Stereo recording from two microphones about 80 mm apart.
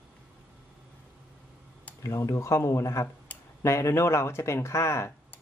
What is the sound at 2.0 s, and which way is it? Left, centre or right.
Speech, left.